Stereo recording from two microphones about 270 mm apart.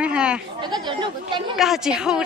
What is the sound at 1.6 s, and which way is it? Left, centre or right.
Speech, centre.